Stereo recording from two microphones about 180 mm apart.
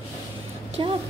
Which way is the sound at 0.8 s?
25° right (ahead or behind).